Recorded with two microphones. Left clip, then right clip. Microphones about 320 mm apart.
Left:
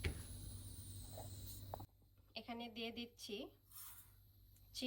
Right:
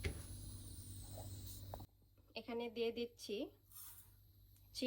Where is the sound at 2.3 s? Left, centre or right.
Centre.